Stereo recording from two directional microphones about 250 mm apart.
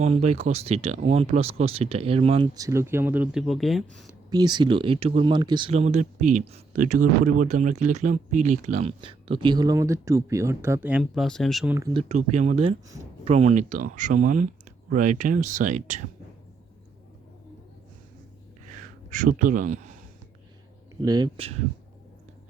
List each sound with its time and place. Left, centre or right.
0.0 s speech: right; by 3.8 s centre
4.3 s speech: centre
11.9 s speech: right
19.1 s speech: right
20.9 s speech: centre